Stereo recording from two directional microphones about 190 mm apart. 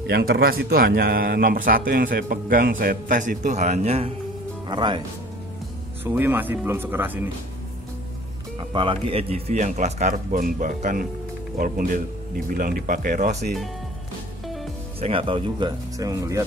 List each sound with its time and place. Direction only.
0.0 s a man's voice: 55° right (ahead or behind); by 5.0 s 25° right (ahead or behind)
6.0 s speech: 10° right (ahead or behind)
8.5 s a man's voice: 25° right (ahead or behind)
15.0 s speech: 30° right (ahead or behind)